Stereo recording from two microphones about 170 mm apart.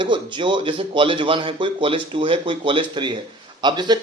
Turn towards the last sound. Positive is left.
turn(degrees=-25)  # may be behind; listen again after turning